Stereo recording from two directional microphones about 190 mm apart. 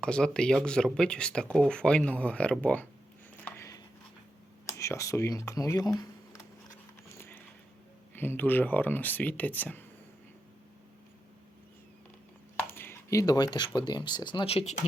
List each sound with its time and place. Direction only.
0.0 s speech: 5° left (ahead or behind)
3.4 s a sound: 15° left (ahead or behind)
4.6 s speech: 15° left (ahead or behind)
7.2 s a sound: 10° left (ahead or behind)
8.1 s speech: 10° left (ahead or behind)
12.6 s speech: 10° left (ahead or behind); by 14.8 s 35° left (ahead or behind)